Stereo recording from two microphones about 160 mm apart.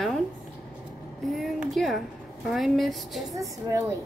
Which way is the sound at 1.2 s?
Centre (ahead or behind).